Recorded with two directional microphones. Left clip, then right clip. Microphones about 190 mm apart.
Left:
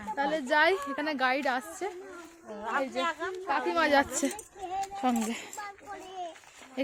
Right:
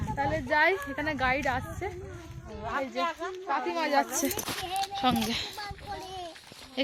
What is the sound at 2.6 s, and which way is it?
A woman's voice, 60° left (ahead or behind).